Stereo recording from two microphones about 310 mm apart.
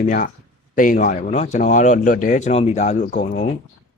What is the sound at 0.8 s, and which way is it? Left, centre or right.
Speech, left.